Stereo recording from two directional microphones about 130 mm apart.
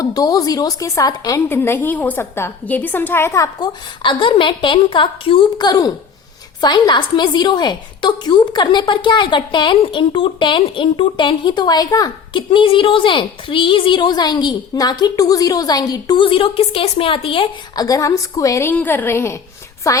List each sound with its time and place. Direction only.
0.0 s a woman's voice: 30° left (ahead or behind)
1.5 s a woman's voice: 15° left (ahead or behind); by 17.5 s 45° left (ahead or behind)
17.7 s a woman's voice: 25° left (ahead or behind)